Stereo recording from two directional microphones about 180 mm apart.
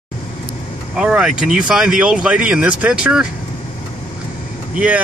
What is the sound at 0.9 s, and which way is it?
Speech, 5° right (ahead or behind).